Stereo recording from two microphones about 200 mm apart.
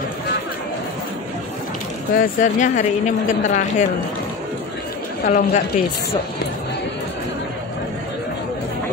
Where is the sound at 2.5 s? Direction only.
35° left (ahead or behind).